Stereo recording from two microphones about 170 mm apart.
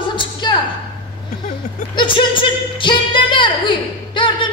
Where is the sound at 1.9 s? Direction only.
30° left (ahead or behind).